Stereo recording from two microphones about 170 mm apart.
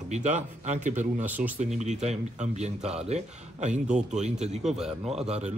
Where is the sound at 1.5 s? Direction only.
40° right (ahead or behind).